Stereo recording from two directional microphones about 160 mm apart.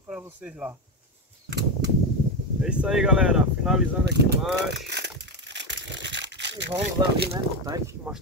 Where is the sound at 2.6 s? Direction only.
5° right (ahead or behind).